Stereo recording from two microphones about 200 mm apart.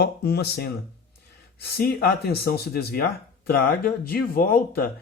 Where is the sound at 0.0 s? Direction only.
55° left (ahead or behind).